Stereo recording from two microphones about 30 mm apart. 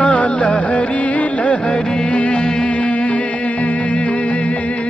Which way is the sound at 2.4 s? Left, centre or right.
Left.